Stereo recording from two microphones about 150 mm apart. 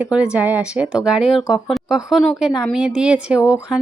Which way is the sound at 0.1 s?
5° right (ahead or behind).